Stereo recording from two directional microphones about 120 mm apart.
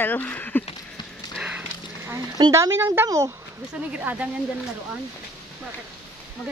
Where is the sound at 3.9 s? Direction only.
10° right (ahead or behind).